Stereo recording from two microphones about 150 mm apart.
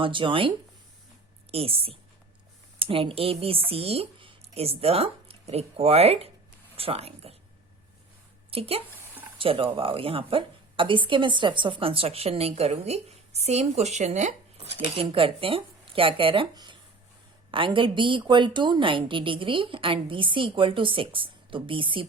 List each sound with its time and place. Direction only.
0.0 s a woman's voice: 35° right (ahead or behind)
8.4 s a woman's voice: 40° right (ahead or behind)
14.9 s a woman's voice: 35° right (ahead or behind)